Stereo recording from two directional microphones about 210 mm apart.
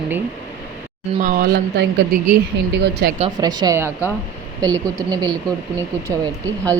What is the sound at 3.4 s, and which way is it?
A woman's voice, 20° right (ahead or behind).